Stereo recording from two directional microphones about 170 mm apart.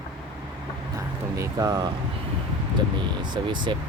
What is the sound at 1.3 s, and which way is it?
Speech, 20° right (ahead or behind).